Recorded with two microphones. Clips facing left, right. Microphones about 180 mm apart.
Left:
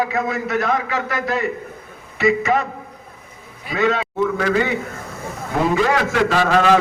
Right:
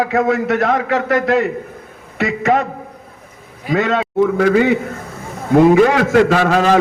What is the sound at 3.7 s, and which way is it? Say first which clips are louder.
Speech: right 3 dB; 55° right (ahead or behind).